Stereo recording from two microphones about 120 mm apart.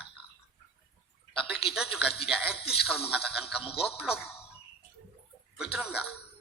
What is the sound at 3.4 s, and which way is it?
Speech, 50° left (ahead or behind).